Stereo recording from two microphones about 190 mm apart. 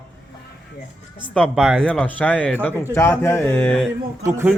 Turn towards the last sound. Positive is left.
turn(degrees=-10)  # may be behind; listen again after turning